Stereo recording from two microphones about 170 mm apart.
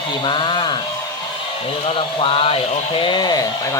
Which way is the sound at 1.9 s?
30° left (ahead or behind).